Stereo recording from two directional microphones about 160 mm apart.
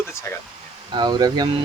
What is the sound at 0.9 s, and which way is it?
Speech, 25° right (ahead or behind).